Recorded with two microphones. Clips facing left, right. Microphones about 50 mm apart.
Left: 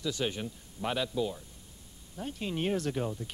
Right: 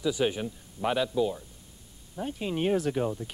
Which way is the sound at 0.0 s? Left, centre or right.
Centre.